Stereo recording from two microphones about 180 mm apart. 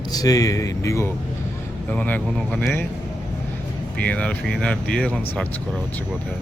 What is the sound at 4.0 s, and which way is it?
Speech, 5° left (ahead or behind).